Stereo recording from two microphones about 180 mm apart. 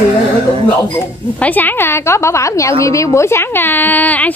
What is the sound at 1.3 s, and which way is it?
A woman's voice, 10° left (ahead or behind).